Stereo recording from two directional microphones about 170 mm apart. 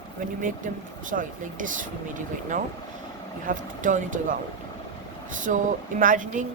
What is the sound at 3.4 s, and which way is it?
Speech, 50° right (ahead or behind).